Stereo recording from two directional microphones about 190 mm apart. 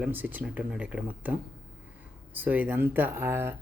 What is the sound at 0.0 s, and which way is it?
Speech, 10° right (ahead or behind).